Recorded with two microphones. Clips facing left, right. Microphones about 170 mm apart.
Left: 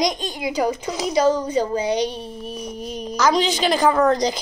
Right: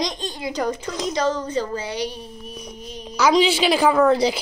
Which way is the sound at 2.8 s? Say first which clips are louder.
Left 7 dB; 40° left (ahead or behind).